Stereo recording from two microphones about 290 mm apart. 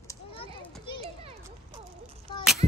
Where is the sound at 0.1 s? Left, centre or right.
Centre.